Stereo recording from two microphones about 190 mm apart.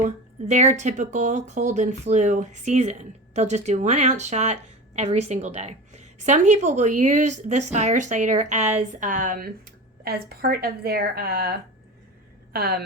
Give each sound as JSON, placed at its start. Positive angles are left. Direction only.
{"t": 0.0, "sound": "speech", "side_deg": -35}